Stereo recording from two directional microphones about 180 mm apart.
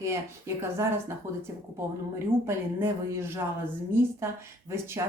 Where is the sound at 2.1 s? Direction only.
15° right (ahead or behind).